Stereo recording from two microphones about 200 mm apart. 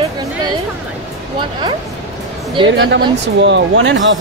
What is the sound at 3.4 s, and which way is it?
Speech, 60° right (ahead or behind).